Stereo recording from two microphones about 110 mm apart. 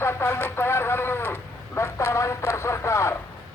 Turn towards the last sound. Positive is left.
turn(degrees=25)  # may be behind; listen again after turning